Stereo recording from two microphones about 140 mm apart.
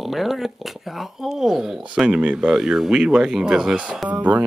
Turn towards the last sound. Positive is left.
turn(degrees=-10)  # may be behind; listen again after turning